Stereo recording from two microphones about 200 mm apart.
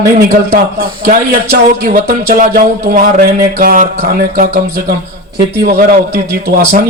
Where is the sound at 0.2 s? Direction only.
45° right (ahead or behind).